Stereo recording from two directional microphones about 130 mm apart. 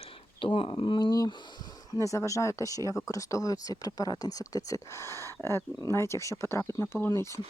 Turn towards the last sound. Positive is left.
turn(degrees=20)  # may be behind; listen again after turning